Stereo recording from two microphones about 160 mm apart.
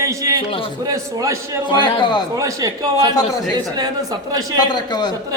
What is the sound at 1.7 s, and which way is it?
Speech, 30° left (ahead or behind).